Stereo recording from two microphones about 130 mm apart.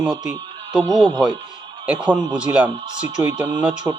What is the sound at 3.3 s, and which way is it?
Speech, 35° right (ahead or behind).